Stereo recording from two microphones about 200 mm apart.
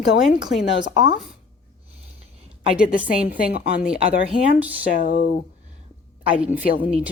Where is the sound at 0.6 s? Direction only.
65° left (ahead or behind).